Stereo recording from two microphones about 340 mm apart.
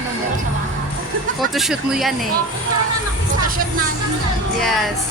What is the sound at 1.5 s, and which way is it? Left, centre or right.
Speech, centre.